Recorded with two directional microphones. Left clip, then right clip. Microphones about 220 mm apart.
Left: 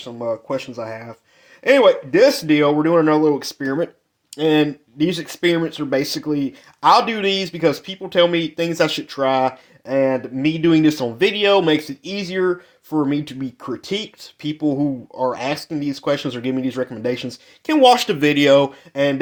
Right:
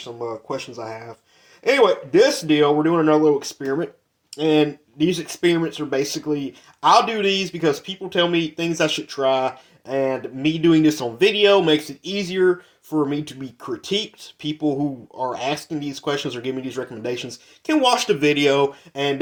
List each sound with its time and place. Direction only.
0.0 s speech: 35° left (ahead or behind)
14.2 s speech: 90° left
14.8 s speech: 35° left (ahead or behind)